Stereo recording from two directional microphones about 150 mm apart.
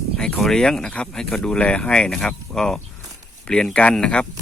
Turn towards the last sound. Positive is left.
turn(degrees=5)  # may be behind; listen again after turning